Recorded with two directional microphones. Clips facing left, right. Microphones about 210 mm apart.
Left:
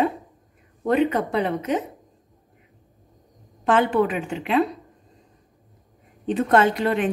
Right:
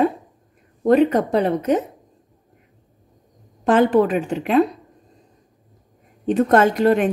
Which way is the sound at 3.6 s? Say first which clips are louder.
Right 4 dB; 40° right (ahead or behind).